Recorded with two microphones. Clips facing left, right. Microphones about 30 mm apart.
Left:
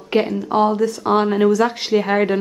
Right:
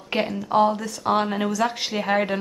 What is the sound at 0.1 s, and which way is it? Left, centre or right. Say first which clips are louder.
A woman's voice: left 4 dB; centre.